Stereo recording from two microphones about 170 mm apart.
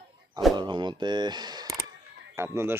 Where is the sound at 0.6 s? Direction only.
25° right (ahead or behind).